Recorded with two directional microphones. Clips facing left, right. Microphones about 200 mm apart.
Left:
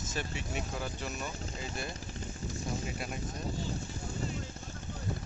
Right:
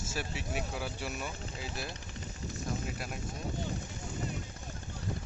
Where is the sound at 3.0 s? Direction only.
Centre (ahead or behind).